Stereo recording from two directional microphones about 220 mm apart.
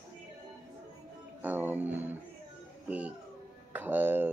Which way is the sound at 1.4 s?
10° right (ahead or behind).